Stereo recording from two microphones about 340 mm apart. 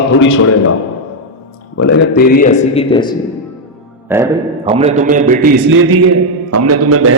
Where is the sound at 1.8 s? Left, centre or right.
Left; by 3.1 s centre.